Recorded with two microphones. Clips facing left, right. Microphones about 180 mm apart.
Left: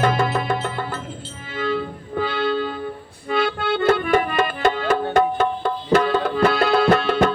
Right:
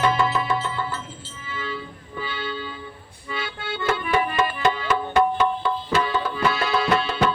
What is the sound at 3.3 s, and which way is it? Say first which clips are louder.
Accordion: left 10 dB; 60° left (ahead or behind).